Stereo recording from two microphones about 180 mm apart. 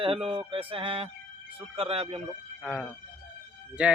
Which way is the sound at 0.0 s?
30° right (ahead or behind).